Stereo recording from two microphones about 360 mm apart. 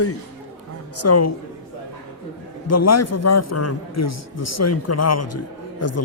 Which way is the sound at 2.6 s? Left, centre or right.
Left.